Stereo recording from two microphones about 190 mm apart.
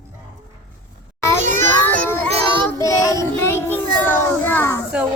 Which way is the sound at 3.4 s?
15° left (ahead or behind).